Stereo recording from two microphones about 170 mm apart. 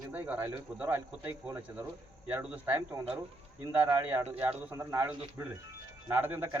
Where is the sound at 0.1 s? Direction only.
10° right (ahead or behind).